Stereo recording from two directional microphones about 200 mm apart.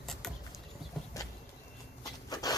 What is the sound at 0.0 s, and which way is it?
Vehicle, centre (ahead or behind).